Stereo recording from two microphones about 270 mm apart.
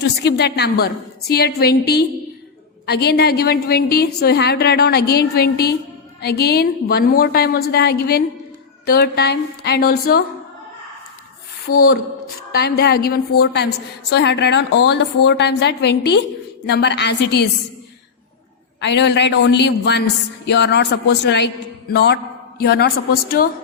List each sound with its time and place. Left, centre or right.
0.2 s a man's voice: left
12.5 s a man's voice: left
18.8 s a man's voice: left